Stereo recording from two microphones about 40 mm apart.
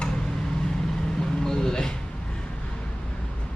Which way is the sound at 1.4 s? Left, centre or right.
Centre.